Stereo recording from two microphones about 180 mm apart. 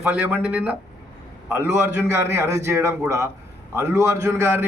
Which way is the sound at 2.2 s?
15° right (ahead or behind).